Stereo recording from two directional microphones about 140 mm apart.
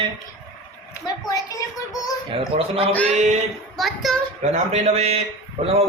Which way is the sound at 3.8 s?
Centre (ahead or behind).